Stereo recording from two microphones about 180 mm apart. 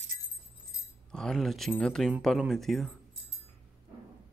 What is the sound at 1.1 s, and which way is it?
Speech, centre (ahead or behind).